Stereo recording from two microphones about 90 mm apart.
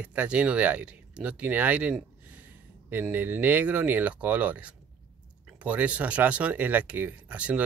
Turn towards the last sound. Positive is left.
turn(degrees=-15)  # may be behind; listen again after turning